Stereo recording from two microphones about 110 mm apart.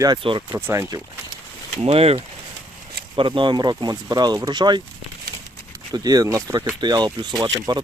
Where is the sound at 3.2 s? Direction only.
50° right (ahead or behind).